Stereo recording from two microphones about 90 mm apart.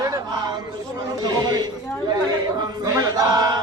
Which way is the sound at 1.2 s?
50° right (ahead or behind).